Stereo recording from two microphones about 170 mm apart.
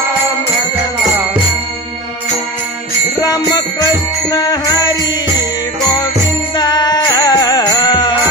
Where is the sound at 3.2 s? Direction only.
20° left (ahead or behind).